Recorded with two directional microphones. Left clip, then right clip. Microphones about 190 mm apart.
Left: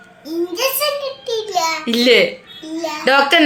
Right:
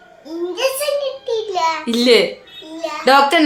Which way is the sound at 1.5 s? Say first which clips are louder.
Left 2 dB; 5° left (ahead or behind).